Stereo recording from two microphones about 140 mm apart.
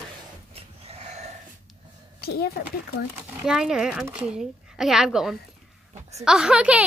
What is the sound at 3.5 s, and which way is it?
A woman's voice, 5° right (ahead or behind).